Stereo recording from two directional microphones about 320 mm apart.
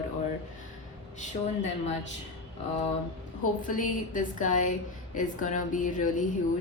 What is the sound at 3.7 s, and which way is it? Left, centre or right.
A woman's voice, left.